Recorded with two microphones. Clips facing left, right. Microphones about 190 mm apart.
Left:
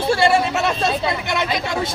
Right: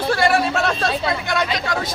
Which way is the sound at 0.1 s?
25° left (ahead or behind).